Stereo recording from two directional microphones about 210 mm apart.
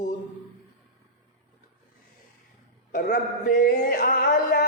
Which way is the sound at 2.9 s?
45° left (ahead or behind).